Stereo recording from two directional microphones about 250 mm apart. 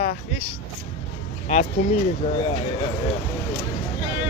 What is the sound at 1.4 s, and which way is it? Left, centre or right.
Speech, left.